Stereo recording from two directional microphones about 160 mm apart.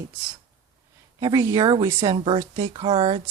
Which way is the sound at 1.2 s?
20° right (ahead or behind).